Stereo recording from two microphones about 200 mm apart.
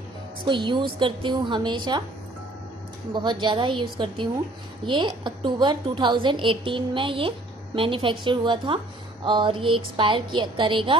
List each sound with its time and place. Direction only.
0.5 s a woman's voice: 25° right (ahead or behind)
3.1 s a woman's voice: 25° right (ahead or behind)